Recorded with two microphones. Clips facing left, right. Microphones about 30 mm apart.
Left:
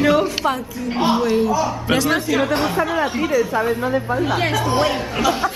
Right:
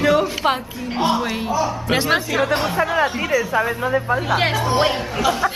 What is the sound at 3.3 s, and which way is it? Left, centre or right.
Speech, right.